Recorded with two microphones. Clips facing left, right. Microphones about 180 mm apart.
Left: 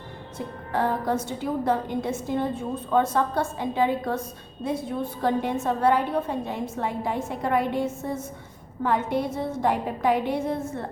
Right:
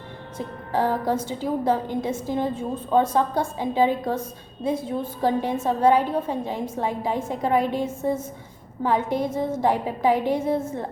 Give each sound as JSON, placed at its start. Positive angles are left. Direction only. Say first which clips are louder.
{"t": 0.7, "sound": "a woman's voice", "louder": "right 2 dB", "side_deg": -10}
{"t": 2.9, "sound": "a woman's voice", "louder": "right 2 dB", "side_deg": -10}